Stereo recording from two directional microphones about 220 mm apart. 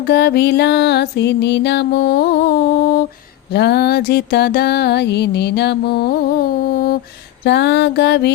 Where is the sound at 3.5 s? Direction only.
50° left (ahead or behind).